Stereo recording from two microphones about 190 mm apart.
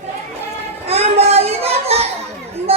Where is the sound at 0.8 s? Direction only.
30° right (ahead or behind).